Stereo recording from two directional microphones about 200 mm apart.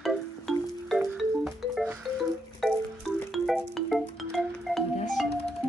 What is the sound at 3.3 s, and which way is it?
Music, centre (ahead or behind).